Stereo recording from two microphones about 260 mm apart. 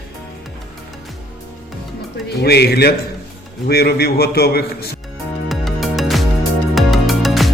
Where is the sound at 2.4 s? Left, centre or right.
Left.